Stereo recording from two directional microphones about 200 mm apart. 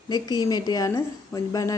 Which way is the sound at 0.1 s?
20° left (ahead or behind).